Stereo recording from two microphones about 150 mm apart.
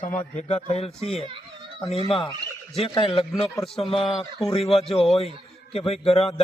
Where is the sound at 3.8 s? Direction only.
35° left (ahead or behind).